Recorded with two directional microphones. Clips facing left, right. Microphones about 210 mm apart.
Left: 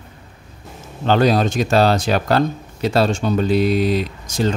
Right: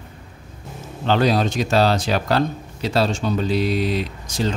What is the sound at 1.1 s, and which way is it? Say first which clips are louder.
Speech: left 3 dB; 50° left (ahead or behind).